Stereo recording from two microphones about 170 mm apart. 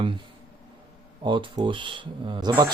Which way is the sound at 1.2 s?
30° right (ahead or behind).